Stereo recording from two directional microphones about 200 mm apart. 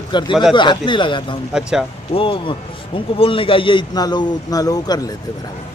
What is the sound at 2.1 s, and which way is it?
A man's voice, 25° left (ahead or behind).